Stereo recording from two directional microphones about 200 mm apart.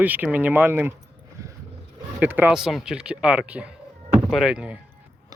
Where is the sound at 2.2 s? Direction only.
10° right (ahead or behind).